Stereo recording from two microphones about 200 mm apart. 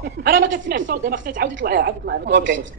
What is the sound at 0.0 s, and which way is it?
A woman's voice, 55° right (ahead or behind).